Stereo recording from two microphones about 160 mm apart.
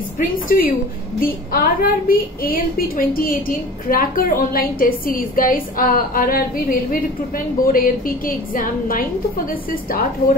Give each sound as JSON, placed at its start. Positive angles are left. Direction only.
{"t": 0.5, "sound": "a woman's voice", "side_deg": 65}